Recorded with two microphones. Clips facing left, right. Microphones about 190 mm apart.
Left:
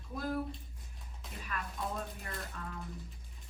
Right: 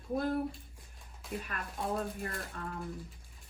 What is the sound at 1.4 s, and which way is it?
A woman's voice, 50° right (ahead or behind).